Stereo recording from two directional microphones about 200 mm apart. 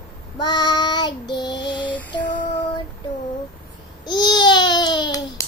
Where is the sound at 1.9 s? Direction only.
10° left (ahead or behind).